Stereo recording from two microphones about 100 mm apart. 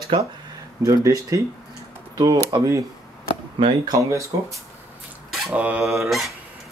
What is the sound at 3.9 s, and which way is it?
Speech, 30° right (ahead or behind).